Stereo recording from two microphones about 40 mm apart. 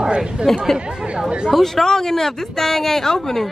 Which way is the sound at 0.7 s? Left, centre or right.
Right.